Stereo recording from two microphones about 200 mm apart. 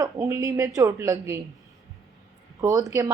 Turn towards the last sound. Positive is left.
turn(degrees=-15)  # may be behind; listen again after turning